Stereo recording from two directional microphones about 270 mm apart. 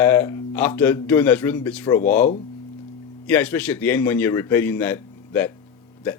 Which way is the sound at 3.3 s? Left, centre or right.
Centre.